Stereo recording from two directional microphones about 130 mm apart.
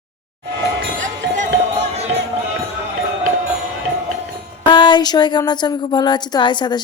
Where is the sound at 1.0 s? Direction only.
65° right (ahead or behind).